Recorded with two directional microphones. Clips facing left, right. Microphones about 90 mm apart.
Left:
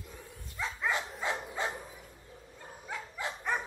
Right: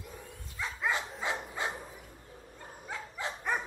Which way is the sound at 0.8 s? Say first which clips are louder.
Even; 15° right (ahead or behind).